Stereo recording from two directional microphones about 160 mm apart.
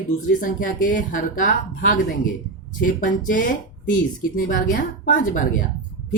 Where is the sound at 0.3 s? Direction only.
55° left (ahead or behind).